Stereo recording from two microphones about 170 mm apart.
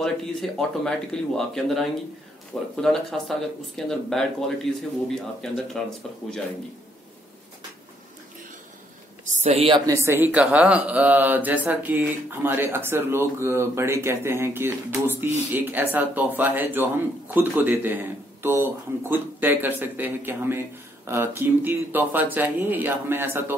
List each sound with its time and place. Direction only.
0.0 s speech: 5° left (ahead or behind)
9.2 s a sound: 40° right (ahead or behind)
9.8 s speech: 15° right (ahead or behind)